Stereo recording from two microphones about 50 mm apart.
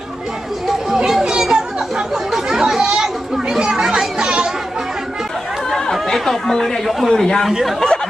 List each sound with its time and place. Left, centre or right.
0.7 s chatter: centre
3.7 s children playing: centre
5.7 s chatter: centre
7.1 s speech: centre
7.4 s speech: centre